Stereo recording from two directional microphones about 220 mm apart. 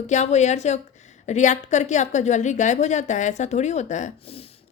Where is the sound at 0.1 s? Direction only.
30° left (ahead or behind).